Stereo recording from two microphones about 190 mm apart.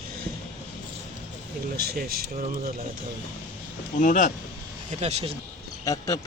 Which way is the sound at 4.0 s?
40° left (ahead or behind).